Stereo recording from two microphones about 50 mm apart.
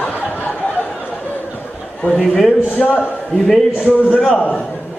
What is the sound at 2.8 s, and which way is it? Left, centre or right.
Speech, centre.